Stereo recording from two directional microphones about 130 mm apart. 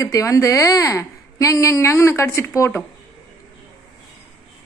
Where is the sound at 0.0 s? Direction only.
25° left (ahead or behind).